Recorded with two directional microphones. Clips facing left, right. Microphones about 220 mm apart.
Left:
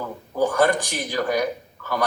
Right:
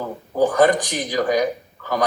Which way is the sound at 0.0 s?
15° right (ahead or behind).